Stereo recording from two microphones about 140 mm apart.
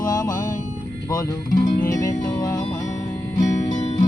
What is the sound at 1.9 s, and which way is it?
Music, 20° left (ahead or behind).